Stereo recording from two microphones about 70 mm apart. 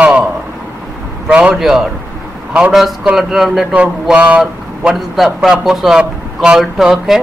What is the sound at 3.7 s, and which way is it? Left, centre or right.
Speech, centre.